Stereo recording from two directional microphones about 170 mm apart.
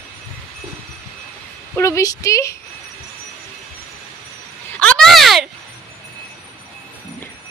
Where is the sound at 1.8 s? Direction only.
20° left (ahead or behind).